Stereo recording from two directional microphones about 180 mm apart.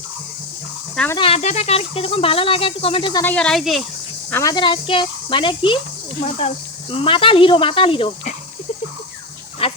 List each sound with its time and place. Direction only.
1.2 s speech: 35° left (ahead or behind)
3.2 s speech: 5° left (ahead or behind)
4.3 s speech: 15° left (ahead or behind)
4.5 s speech: 25° left (ahead or behind)
9.6 s speech: 30° left (ahead or behind)